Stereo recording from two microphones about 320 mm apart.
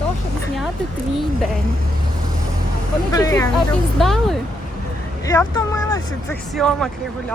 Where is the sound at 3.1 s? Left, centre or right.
Centre.